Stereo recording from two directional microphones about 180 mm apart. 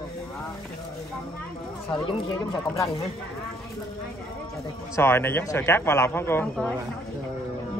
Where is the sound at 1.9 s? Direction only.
25° left (ahead or behind).